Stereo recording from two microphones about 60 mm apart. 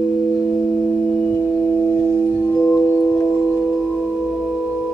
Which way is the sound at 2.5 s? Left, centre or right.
Left.